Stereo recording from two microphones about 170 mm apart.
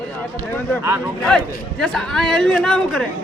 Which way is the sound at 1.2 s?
5° left (ahead or behind).